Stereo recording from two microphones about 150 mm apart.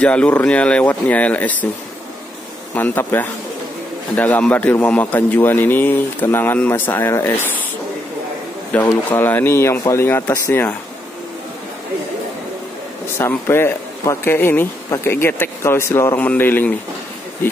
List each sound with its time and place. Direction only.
0.0 s speech: 10° left (ahead or behind)
2.7 s speech: 15° left (ahead or behind)
8.7 s speech: 10° left (ahead or behind)
13.2 s speech: 15° left (ahead or behind)